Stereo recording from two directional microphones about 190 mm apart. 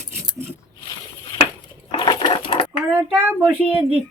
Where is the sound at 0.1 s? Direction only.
10° right (ahead or behind).